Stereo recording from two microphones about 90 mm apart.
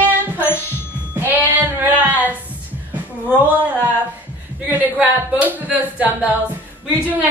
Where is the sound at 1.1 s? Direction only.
20° right (ahead or behind).